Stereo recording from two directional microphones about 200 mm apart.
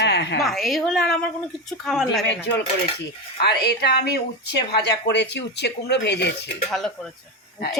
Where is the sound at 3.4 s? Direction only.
55° left (ahead or behind).